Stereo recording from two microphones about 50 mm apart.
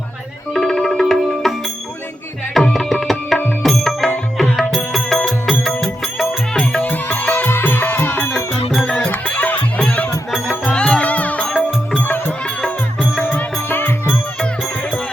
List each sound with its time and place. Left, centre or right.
0.5 s music: centre
2.7 s tabla: centre
3.6 s music: centre
6.7 s music: left
8.7 s music: centre
9.1 s music: left
11.9 s music: left
12.6 s music: centre
13.3 s music: left